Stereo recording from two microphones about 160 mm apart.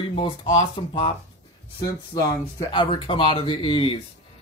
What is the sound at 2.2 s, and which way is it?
Speech, 20° left (ahead or behind).